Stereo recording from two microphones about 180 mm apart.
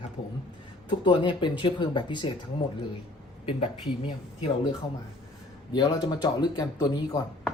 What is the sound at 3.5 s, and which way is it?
Speech, 30° left (ahead or behind).